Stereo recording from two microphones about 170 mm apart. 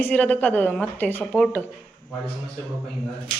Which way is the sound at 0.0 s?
10° left (ahead or behind).